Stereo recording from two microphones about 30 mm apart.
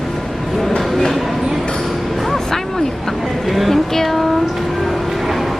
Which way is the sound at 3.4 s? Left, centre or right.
Centre.